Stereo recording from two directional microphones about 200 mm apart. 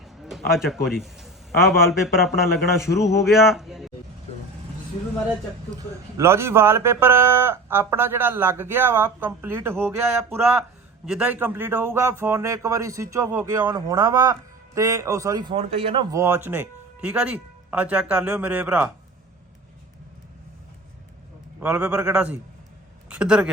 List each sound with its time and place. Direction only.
0.5 s a man's voice: centre (ahead or behind)
5.7 s a man's voice: 15° right (ahead or behind)
16.1 s a man's voice: 15° right (ahead or behind)
21.6 s a man's voice: 5° right (ahead or behind)